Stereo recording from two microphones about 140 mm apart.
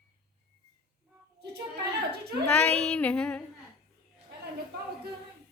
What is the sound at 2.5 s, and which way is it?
Child singing, 10° left (ahead or behind).